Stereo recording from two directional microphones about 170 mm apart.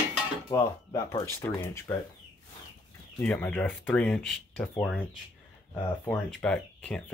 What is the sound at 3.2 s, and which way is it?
Speech, 10° left (ahead or behind).